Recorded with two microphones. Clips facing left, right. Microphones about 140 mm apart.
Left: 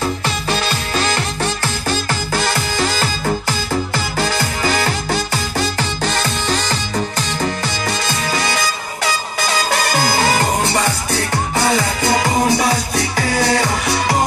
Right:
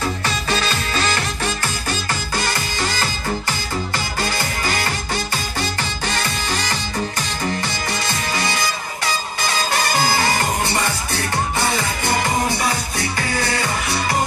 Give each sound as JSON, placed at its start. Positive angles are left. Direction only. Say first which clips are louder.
{"t": 2.0, "sound": "music", "louder": "left 4 dB", "side_deg": 90}
{"t": 3.9, "sound": "music", "louder": "left 4 dB", "side_deg": 90}
{"t": 12.0, "sound": "music", "louder": "left 3 dB", "side_deg": 90}